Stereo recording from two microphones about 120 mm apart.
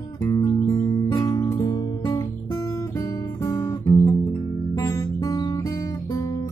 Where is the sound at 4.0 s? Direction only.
20° left (ahead or behind).